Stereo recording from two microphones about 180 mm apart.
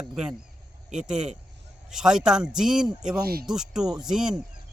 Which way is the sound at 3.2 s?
55° right (ahead or behind).